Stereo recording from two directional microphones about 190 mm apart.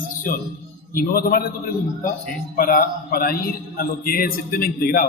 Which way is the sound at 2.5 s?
50° left (ahead or behind).